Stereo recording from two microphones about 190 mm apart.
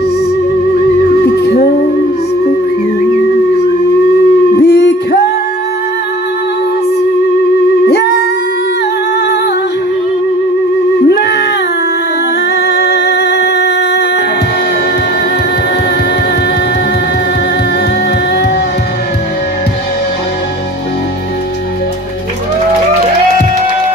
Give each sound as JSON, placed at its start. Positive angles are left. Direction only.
{"t": 1.2, "sound": "music", "side_deg": 55}
{"t": 4.6, "sound": "a sound", "side_deg": 60}
{"t": 7.8, "sound": "music", "side_deg": 60}
{"t": 11.0, "sound": "music", "side_deg": 60}
{"t": 12.5, "sound": "music", "side_deg": 60}